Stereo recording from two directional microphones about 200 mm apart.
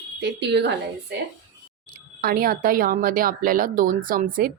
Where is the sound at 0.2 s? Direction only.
60° right (ahead or behind).